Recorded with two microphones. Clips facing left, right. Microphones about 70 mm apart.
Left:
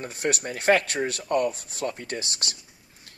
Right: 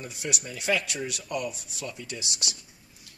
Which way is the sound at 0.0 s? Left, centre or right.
Left.